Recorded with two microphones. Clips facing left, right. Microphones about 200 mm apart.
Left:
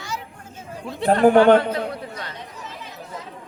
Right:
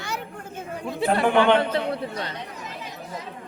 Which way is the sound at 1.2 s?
40° left (ahead or behind).